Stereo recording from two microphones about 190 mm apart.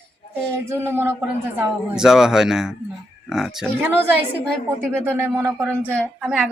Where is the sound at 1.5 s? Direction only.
5° right (ahead or behind).